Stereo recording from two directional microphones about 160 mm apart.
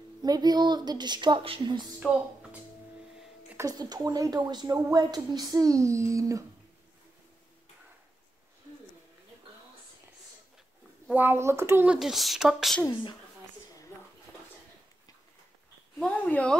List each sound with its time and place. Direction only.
0.2 s speech: 25° right (ahead or behind)
3.5 s speech: 25° right (ahead or behind)
11.1 s speech: 10° right (ahead or behind)
16.0 s a sound: 10° left (ahead or behind)